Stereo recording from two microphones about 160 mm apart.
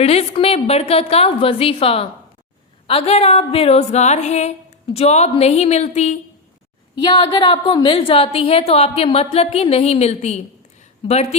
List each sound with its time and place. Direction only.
0.0 s a woman's voice: 40° left (ahead or behind)
7.0 s a woman's voice: 30° left (ahead or behind)